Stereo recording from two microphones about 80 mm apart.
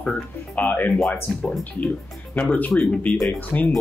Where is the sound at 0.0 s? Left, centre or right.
Centre.